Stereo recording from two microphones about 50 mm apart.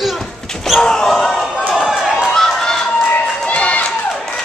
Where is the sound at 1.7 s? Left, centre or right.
Centre.